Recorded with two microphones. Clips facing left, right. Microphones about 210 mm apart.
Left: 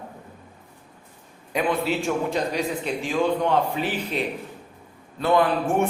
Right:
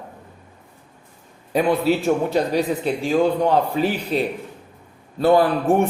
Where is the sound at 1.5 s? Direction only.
35° right (ahead or behind).